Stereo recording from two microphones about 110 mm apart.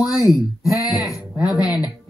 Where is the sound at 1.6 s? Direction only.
35° left (ahead or behind).